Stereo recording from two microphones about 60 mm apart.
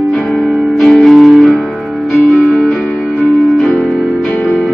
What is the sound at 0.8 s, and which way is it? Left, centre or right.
Music, centre.